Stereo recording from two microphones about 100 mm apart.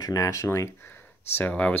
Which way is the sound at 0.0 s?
35° left (ahead or behind).